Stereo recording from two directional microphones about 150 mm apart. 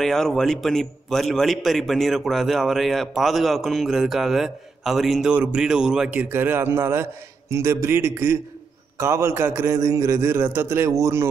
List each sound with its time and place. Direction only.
0.0 s a man's voice: centre (ahead or behind); by 11.2 s 20° right (ahead or behind)